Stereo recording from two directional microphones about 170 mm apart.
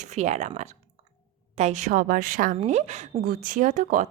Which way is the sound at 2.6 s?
40° right (ahead or behind).